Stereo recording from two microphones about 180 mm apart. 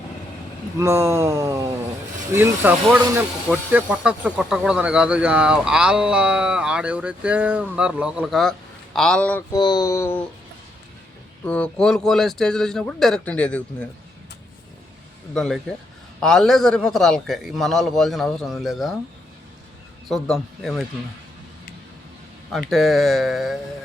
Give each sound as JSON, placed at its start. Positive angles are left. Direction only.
{"t": 0.8, "sound": "a sound", "side_deg": -15}
{"t": 3.2, "sound": "speech", "side_deg": -10}
{"t": 9.5, "sound": "a sound", "side_deg": 25}
{"t": 11.4, "sound": "speech", "side_deg": 5}
{"t": 16.2, "sound": "speech", "side_deg": 5}
{"t": 20.1, "sound": "speech", "side_deg": 0}
{"t": 22.7, "sound": "speech", "side_deg": 0}